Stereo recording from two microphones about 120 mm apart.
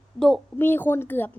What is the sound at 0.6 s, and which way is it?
Child singing, 15° left (ahead or behind).